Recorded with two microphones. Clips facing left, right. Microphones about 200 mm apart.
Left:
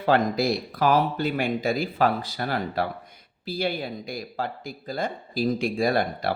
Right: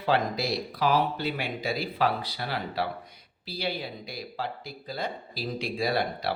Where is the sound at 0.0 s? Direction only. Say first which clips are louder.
Left 5 dB; 50° left (ahead or behind).